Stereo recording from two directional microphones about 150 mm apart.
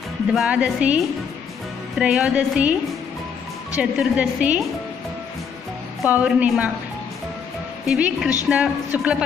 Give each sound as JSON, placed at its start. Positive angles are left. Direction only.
{"t": 0.3, "sound": "a woman's voice", "side_deg": -5}
{"t": 3.7, "sound": "a woman's voice", "side_deg": -10}
{"t": 6.0, "sound": "a woman's voice", "side_deg": -10}
{"t": 7.8, "sound": "a woman's voice", "side_deg": -5}